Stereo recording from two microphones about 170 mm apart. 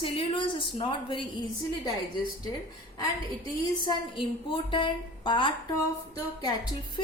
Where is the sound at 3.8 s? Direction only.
30° left (ahead or behind).